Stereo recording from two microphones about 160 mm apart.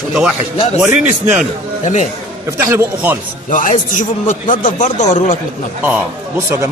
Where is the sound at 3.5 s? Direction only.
55° left (ahead or behind).